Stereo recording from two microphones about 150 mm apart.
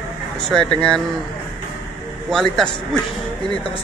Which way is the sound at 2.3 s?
5° left (ahead or behind).